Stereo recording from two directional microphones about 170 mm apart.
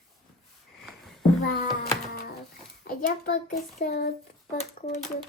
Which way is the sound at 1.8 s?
60° left (ahead or behind).